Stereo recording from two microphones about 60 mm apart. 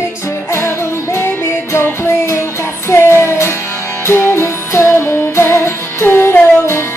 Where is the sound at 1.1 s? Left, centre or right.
Left.